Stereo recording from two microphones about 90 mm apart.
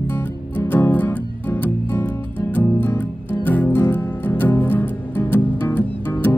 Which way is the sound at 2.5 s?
20° left (ahead or behind).